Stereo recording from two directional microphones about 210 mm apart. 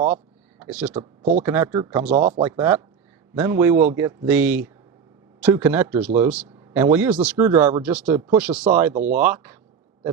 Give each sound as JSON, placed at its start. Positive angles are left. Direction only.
{"t": 0.6, "sound": "speech", "side_deg": -5}
{"t": 2.1, "sound": "speech", "side_deg": -35}
{"t": 2.4, "sound": "a man's voice", "side_deg": -10}